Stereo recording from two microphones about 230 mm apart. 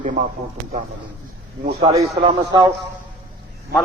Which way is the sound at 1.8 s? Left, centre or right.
Centre.